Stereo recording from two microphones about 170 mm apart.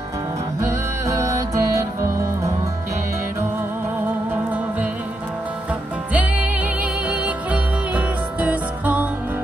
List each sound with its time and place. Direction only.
0.6 s music: 15° right (ahead or behind)
6.1 s music: 10° right (ahead or behind)